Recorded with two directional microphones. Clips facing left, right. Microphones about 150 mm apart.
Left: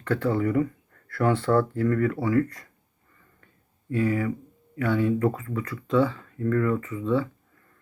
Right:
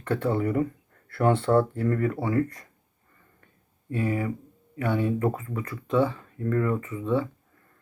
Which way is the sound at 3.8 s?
25° right (ahead or behind).